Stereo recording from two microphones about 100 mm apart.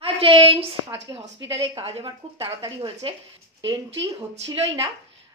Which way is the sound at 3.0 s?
60° right (ahead or behind).